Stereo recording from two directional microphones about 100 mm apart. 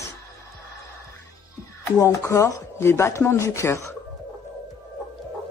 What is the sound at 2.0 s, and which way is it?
Speech, 30° left (ahead or behind).